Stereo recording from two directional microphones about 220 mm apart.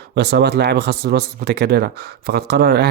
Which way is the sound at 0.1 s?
50° right (ahead or behind).